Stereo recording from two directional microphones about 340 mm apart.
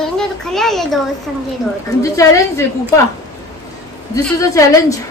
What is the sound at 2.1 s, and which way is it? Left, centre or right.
Speech, centre.